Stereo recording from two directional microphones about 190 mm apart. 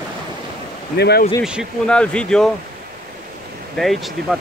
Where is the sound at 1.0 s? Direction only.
60° left (ahead or behind).